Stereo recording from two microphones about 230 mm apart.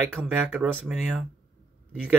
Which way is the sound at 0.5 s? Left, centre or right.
Centre.